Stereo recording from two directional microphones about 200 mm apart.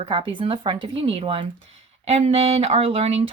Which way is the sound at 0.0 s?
25° right (ahead or behind).